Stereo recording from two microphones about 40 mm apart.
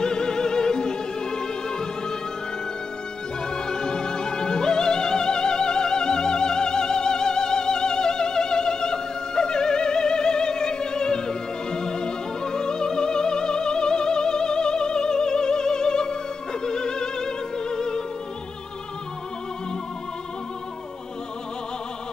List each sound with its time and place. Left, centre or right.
0.0 s opera: centre
3.4 s opera: centre